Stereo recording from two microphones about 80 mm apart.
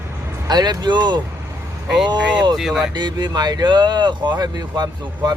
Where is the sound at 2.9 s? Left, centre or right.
Right.